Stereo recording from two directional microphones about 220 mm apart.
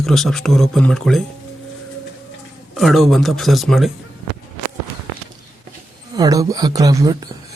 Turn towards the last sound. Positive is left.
turn(degrees=-15)  # may be behind; listen again after turning